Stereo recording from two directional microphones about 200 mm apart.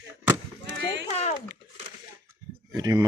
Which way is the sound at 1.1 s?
35° left (ahead or behind).